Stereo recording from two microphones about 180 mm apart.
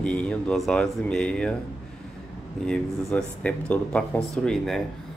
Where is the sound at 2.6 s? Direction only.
5° left (ahead or behind).